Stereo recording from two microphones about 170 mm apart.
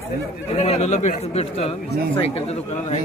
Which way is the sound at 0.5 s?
40° left (ahead or behind).